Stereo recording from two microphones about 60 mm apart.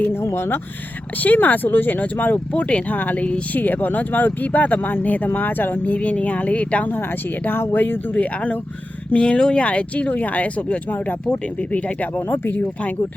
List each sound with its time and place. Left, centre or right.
0.2 s speech: left
1.2 s speech: left
2.5 s speech: centre
3.2 s speech: centre
3.6 s speech: left